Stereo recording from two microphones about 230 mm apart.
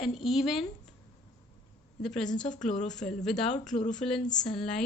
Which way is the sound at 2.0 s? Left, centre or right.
Centre.